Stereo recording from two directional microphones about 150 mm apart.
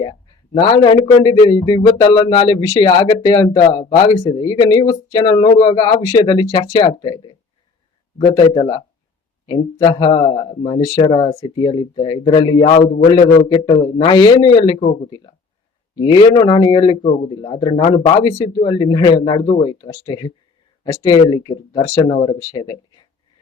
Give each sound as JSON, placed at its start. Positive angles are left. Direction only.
{"t": 0.0, "sound": "speech", "side_deg": 30}
{"t": 16.0, "sound": "speech", "side_deg": 30}